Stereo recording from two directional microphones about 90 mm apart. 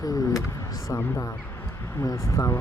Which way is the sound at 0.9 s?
30° left (ahead or behind).